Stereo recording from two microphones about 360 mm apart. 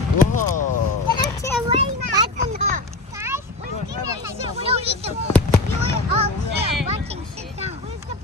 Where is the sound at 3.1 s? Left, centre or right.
Centre.